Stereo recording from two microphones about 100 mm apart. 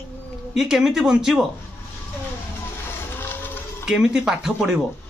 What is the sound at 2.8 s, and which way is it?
Music, 20° left (ahead or behind).